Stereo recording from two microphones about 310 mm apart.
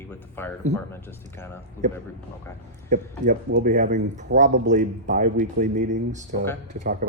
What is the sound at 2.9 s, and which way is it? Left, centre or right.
Speech, right.